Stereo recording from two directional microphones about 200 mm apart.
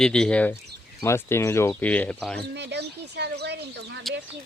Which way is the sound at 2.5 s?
60° right (ahead or behind).